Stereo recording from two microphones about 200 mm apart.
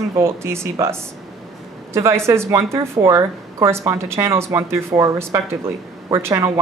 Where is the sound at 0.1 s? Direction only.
15° right (ahead or behind).